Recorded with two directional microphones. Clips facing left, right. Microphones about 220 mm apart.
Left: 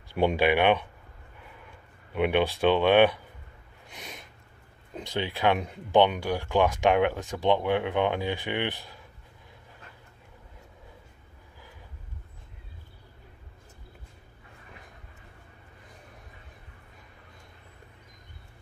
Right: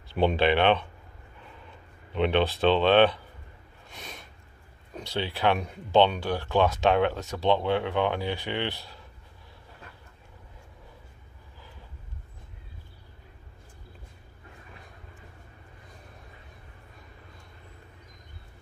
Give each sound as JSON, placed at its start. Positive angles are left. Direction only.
{"t": 0.1, "sound": "speech", "side_deg": 10}
{"t": 3.9, "sound": "a sound", "side_deg": 15}
{"t": 4.9, "sound": "speech", "side_deg": 15}